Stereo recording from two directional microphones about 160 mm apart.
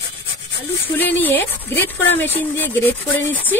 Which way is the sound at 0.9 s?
10° left (ahead or behind).